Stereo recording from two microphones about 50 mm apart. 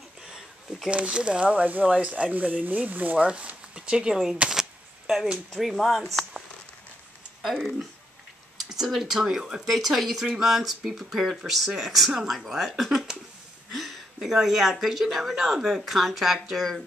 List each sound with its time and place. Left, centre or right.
0.3 s a sound: centre
0.8 s speech: right
2.3 s speech: right
3.3 s a sound: right
5.5 s speech: centre
7.4 s speech: centre
9.7 s speech: centre